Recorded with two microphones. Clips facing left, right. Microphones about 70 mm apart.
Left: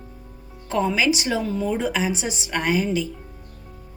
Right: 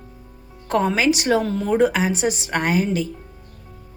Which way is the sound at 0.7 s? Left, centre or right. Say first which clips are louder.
Right 2 dB; right.